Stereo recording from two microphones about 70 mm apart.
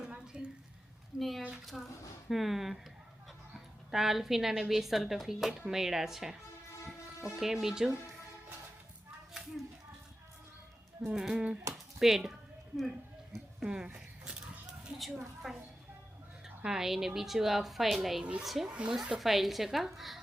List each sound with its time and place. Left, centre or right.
0.0 s a sound: centre
1.1 s a woman's voice: centre
7.3 s speech: centre
11.0 s speech: centre
11.9 s a sound: centre
13.7 s a sound: centre
14.9 s a woman's voice: centre
18.7 s speech: centre
19.2 s a woman's voice: centre